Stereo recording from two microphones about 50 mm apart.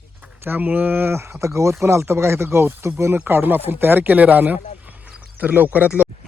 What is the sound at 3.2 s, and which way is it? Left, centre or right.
Speech, right.